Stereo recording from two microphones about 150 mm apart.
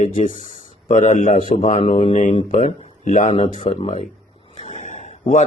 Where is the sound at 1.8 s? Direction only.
40° left (ahead or behind).